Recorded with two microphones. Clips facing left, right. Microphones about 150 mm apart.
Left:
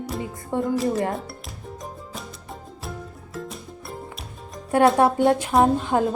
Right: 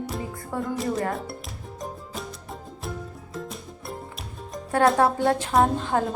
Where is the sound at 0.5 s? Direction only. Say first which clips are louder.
Left 5 dB; 25° left (ahead or behind).